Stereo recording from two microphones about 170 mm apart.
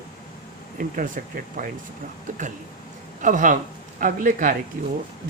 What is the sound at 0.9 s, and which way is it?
Speech, 55° right (ahead or behind).